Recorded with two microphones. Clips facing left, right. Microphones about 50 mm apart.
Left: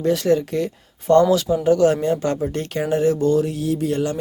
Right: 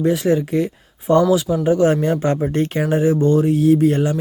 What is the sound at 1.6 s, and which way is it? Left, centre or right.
Speech, right.